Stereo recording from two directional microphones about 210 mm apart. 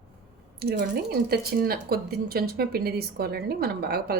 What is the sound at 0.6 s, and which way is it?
A woman's voice, 50° right (ahead or behind).